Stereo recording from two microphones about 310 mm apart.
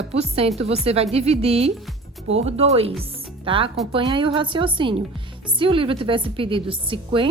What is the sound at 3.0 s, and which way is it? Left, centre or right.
Music, centre.